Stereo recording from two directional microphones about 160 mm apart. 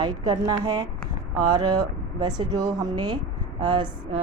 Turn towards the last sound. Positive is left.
turn(degrees=-30)  # may be behind; listen again after turning